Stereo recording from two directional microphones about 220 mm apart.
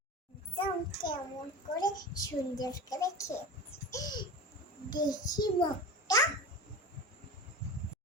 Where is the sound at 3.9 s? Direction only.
15° left (ahead or behind).